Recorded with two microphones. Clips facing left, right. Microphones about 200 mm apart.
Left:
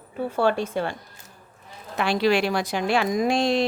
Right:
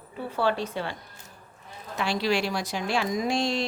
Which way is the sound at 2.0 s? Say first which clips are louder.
Left 5 dB; 60° left (ahead or behind).